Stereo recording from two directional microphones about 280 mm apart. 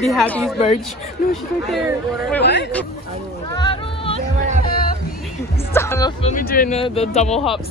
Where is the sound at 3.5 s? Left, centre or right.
Centre.